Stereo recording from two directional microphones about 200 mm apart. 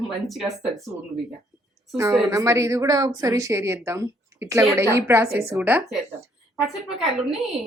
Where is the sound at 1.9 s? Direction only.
15° right (ahead or behind).